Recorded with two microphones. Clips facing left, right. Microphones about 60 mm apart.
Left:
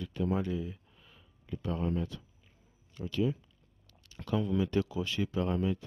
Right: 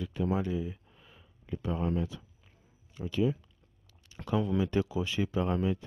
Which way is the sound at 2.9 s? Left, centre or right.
Centre.